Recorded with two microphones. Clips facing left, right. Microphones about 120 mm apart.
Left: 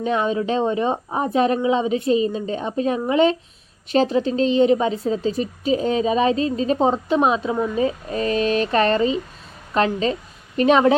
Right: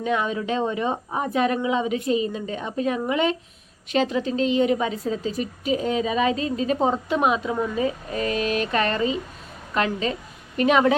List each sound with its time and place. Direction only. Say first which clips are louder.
0.0 s a woman's voice: left 4 dB; 30° left (ahead or behind)